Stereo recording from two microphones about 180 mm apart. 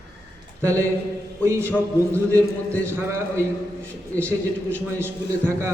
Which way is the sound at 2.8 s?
15° right (ahead or behind).